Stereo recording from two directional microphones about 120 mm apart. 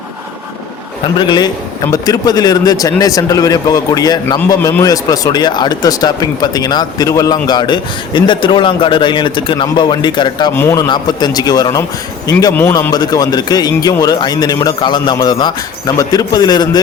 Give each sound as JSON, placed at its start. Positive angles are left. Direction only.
{"t": 1.2, "sound": "speech", "side_deg": 40}
{"t": 10.5, "sound": "a man's voice", "side_deg": 20}
{"t": 10.8, "sound": "a man's voice", "side_deg": 35}